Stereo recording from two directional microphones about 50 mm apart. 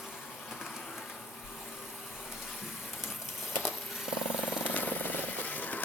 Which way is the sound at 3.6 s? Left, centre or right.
Centre.